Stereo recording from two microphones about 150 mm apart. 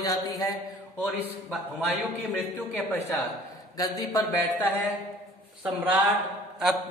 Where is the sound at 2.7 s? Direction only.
15° left (ahead or behind).